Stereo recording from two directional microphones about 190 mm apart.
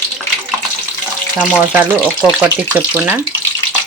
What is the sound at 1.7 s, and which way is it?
Speech, 5° right (ahead or behind).